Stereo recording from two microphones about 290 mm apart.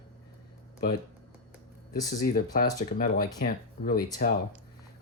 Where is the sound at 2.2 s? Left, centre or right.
Left.